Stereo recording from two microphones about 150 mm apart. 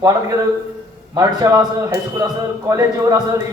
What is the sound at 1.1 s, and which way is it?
A man's voice, 25° right (ahead or behind).